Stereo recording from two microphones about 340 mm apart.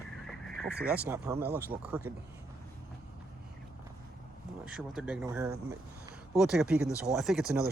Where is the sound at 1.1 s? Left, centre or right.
Centre.